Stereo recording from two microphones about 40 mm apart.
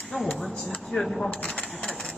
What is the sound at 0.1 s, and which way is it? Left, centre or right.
Speech, left.